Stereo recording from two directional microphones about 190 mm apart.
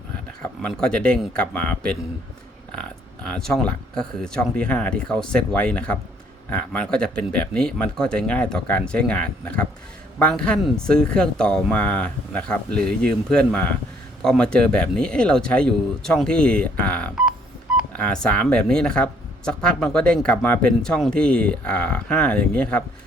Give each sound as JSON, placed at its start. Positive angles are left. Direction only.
{"t": 0.4, "sound": "speech", "side_deg": 5}
{"t": 3.2, "sound": "speech", "side_deg": 5}